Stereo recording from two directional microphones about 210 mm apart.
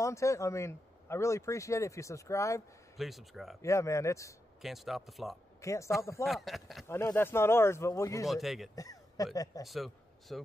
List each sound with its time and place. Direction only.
0.0 s speech: 15° left (ahead or behind)
3.0 s speech: centre (ahead or behind)
3.6 s speech: 15° left (ahead or behind)
4.6 s speech: centre (ahead or behind)
5.6 s speech: 15° left (ahead or behind)
6.2 s speech: centre (ahead or behind)
6.9 s speech: 10° left (ahead or behind)
8.3 s speech: centre (ahead or behind)
8.7 s speech: 15° left (ahead or behind)
9.7 s a man's voice: centre (ahead or behind)